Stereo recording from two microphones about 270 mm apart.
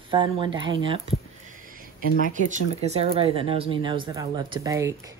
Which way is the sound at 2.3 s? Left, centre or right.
Right.